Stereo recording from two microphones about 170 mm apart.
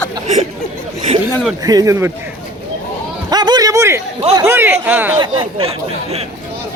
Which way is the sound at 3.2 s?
25° right (ahead or behind).